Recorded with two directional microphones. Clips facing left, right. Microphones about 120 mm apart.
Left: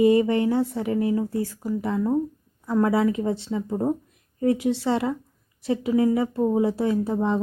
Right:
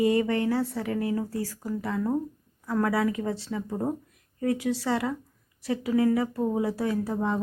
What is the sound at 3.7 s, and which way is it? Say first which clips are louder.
Speech: left 5 dB; 10° left (ahead or behind).